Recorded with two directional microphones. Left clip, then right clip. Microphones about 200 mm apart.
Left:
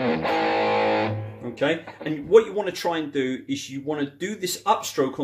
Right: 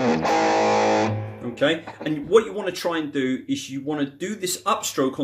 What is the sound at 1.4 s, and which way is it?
Speech, centre (ahead or behind).